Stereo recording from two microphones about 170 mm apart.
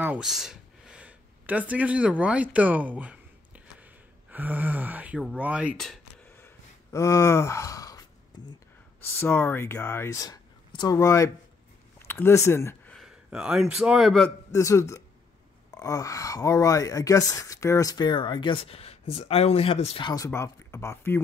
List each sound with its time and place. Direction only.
0.0 s speech: 5° right (ahead or behind)
6.2 s gasp: 15° left (ahead or behind)
9.0 s speech: 10° left (ahead or behind)
12.9 s a man's voice: 5° right (ahead or behind)
14.5 s a man's voice: 20° left (ahead or behind); by 20.1 s 35° left (ahead or behind)
20.2 s speech: 15° left (ahead or behind)